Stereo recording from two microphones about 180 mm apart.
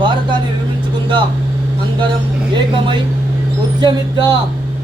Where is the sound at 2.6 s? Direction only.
25° right (ahead or behind).